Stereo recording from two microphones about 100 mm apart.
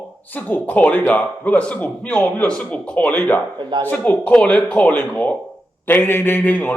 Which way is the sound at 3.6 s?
45° right (ahead or behind).